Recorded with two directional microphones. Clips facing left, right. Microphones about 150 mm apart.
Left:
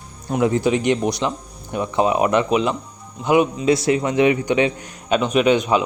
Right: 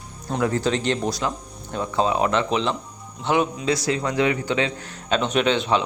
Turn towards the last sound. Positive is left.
turn(degrees=10)  # may be behind; listen again after turning